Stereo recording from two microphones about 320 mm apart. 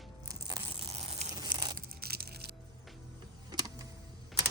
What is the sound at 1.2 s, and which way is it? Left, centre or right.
Tearing, centre.